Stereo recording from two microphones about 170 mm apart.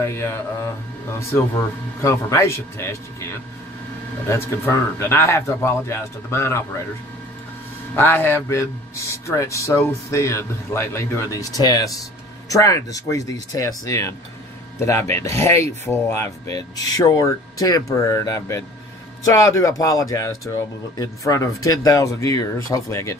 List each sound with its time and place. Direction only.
0.0 s speech: 15° left (ahead or behind)
2.0 s speech: 15° left (ahead or behind)
7.9 s speech: 10° left (ahead or behind)